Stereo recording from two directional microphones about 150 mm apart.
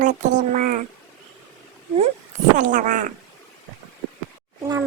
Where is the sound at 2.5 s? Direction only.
55° right (ahead or behind).